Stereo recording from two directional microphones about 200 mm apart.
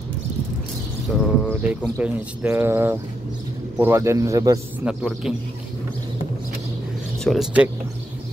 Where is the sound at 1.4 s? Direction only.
5° right (ahead or behind).